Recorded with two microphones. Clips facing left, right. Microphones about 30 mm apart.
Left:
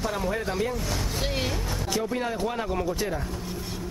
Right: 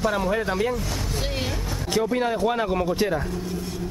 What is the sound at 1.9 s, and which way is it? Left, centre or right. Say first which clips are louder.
Speech: right 6 dB; centre.